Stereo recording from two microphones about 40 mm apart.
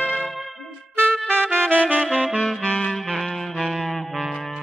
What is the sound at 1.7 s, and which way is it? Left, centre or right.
Saxophone, right.